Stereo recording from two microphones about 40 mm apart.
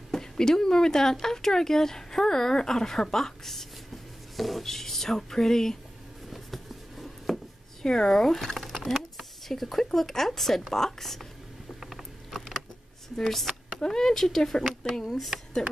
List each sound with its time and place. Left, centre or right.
0.1 s speech: centre
6.3 s a sound: centre
7.8 s speech: centre
11.8 s mechanisms: centre
13.1 s speech: centre